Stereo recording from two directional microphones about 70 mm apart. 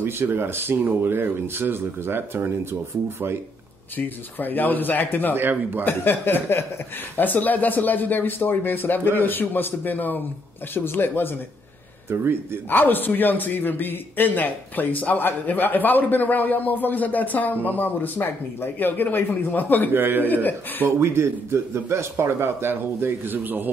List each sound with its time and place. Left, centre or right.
0.0 s speech: right
4.4 s a man's voice: left
5.3 s speech: right
5.9 s a man's voice: left
12.6 s a man's voice: left
19.9 s speech: right